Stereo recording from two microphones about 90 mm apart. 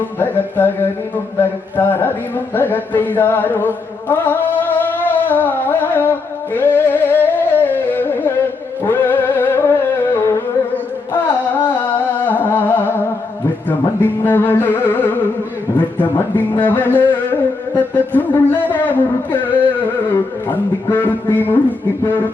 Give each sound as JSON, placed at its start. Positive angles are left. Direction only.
{"t": 0.2, "sound": "music", "side_deg": 25}
{"t": 1.4, "sound": "a man's voice", "side_deg": 20}
{"t": 6.5, "sound": "music", "side_deg": 25}
{"t": 12.1, "sound": "music", "side_deg": 20}
{"t": 16.0, "sound": "speech", "side_deg": 20}
{"t": 20.5, "sound": "music", "side_deg": 20}